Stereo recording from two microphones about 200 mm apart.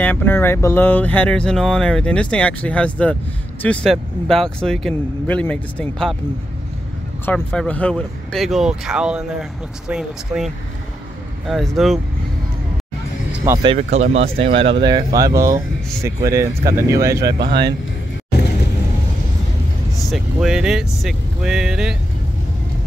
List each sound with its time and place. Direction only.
0.0 s speech: 10° left (ahead or behind)
7.3 s speech: 5° left (ahead or behind)
13.4 s speech: 20° right (ahead or behind)
13.7 s speech: 35° right (ahead or behind); by 17.5 s 20° right (ahead or behind)
17.5 s speech: 55° right (ahead or behind)
20.1 s speech: 5° right (ahead or behind)